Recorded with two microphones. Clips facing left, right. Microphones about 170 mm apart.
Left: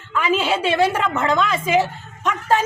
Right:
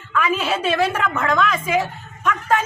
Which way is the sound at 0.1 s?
25° left (ahead or behind).